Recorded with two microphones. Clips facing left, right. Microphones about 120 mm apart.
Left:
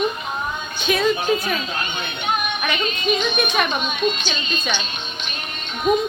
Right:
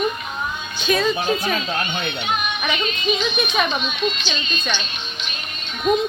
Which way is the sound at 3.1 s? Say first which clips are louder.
Left 1 dB; 55° left (ahead or behind).